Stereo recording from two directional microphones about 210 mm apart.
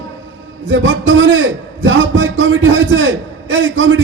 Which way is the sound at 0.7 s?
65° right (ahead or behind).